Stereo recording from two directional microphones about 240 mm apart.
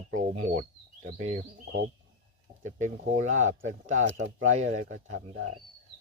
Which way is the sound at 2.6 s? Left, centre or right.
Right.